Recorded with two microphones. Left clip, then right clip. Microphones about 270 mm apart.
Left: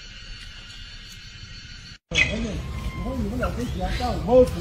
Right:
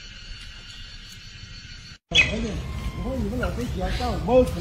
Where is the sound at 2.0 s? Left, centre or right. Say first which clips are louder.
Right 2 dB; centre.